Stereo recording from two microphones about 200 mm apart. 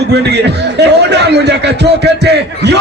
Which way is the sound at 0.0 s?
55° right (ahead or behind).